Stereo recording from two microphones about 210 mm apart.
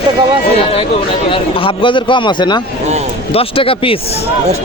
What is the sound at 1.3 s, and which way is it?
Speech, 25° left (ahead or behind).